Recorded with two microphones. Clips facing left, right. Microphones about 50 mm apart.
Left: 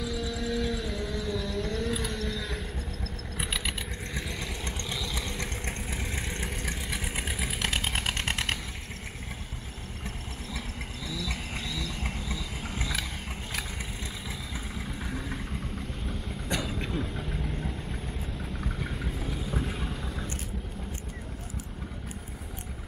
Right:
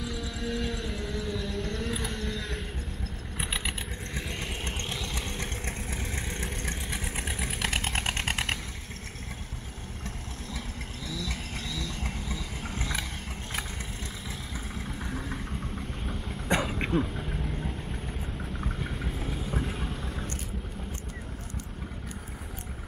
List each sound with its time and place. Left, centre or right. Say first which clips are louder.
0.0 s a sound: left 2 dB; centre
3.3 s mechanisms: even; centre
4.4 s vehicle: right 1 dB; right
5.1 s vehicle: left 1 dB; right
5.7 s vehicle: left 1 dB; centre
6.3 s vehicle: even; centre
11.2 s a sound: left 1 dB; centre
16.4 s vehicle: right 5 dB; right
17.0 s vehicle: right 1 dB; centre
19.8 s boat: even; centre